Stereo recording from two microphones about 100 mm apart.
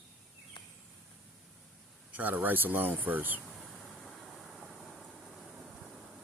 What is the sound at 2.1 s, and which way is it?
Speech, 15° right (ahead or behind).